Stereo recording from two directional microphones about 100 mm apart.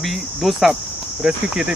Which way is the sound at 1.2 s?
10° right (ahead or behind).